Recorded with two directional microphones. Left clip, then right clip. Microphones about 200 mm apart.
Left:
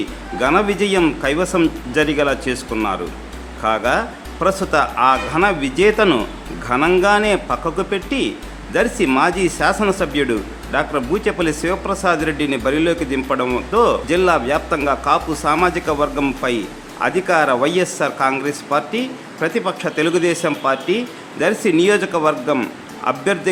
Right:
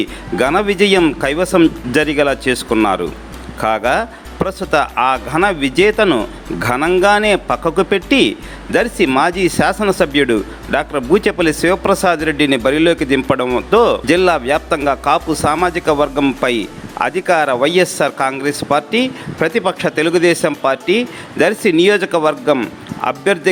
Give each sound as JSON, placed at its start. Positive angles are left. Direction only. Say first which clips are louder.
{"t": 0.3, "sound": "speech", "louder": "right 3 dB", "side_deg": -35}